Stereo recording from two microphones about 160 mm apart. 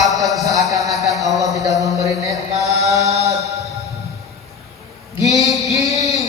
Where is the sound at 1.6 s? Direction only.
20° right (ahead or behind).